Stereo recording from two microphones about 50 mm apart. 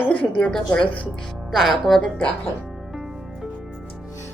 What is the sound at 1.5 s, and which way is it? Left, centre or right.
Speech, centre.